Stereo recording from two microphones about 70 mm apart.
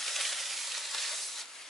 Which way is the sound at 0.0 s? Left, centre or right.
Centre.